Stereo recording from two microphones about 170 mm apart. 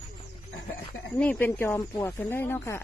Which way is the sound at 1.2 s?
10° left (ahead or behind).